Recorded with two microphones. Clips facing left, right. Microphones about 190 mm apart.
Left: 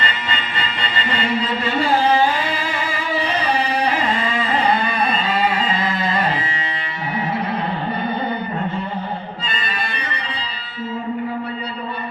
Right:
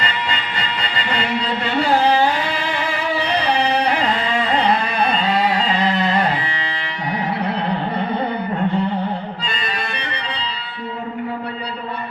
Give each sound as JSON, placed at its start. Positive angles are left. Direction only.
{"t": 0.0, "sound": "music", "side_deg": -70}
{"t": 3.2, "sound": "carnatic music", "side_deg": -70}
{"t": 9.4, "sound": "music", "side_deg": -70}